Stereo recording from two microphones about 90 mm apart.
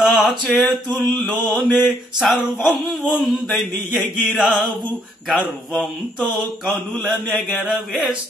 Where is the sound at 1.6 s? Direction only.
Centre (ahead or behind).